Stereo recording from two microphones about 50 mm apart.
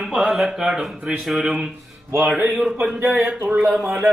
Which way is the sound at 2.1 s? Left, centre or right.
Right.